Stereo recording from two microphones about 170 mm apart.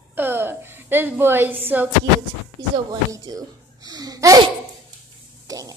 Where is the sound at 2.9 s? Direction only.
20° right (ahead or behind).